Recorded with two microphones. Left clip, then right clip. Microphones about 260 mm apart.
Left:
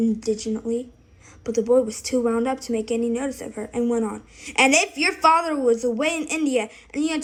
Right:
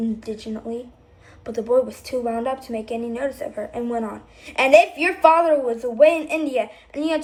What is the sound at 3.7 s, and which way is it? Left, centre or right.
A woman's voice, left.